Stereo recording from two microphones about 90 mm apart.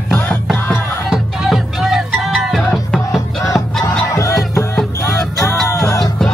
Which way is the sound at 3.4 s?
35° left (ahead or behind).